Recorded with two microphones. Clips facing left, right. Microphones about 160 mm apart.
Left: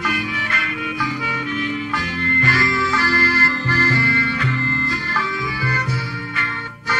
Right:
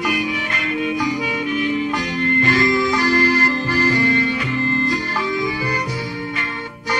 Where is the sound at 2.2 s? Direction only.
20° right (ahead or behind).